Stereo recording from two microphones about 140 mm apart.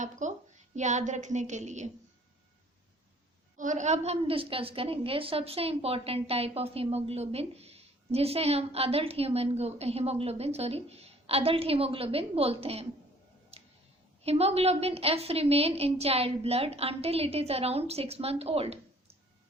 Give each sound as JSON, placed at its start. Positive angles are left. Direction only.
{"t": 0.0, "sound": "a woman's voice", "side_deg": -60}
{"t": 3.6, "sound": "a woman's voice", "side_deg": -60}
{"t": 13.5, "sound": "tick-tock", "side_deg": -45}
{"t": 14.3, "sound": "a woman's voice", "side_deg": -45}